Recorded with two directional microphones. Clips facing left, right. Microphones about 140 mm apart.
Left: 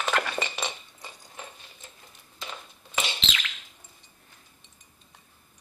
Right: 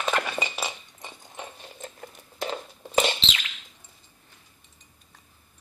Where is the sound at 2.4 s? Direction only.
30° right (ahead or behind).